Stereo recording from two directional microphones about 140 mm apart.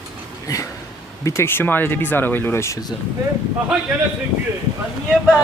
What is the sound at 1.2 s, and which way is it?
Speech, 15° left (ahead or behind).